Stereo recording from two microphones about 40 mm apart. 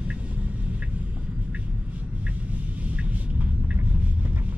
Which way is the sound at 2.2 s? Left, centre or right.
Right.